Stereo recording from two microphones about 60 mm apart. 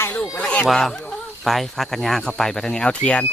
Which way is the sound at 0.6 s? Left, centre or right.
Centre.